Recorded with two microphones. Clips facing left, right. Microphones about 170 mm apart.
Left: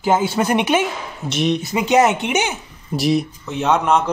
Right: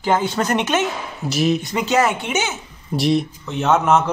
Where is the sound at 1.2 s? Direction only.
Centre (ahead or behind).